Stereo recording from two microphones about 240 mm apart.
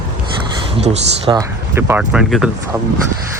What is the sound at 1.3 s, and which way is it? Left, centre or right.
Speech, centre.